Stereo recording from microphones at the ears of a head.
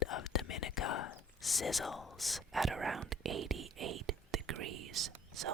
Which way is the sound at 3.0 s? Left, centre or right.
Right.